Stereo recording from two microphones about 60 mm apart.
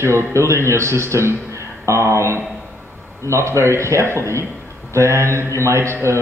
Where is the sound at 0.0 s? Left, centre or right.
Right.